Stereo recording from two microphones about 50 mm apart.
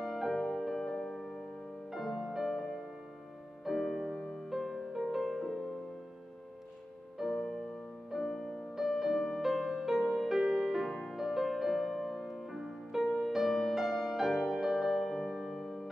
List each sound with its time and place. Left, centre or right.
0.0 s music: centre
7.2 s music: centre
10.9 s music: centre
11.1 s music: centre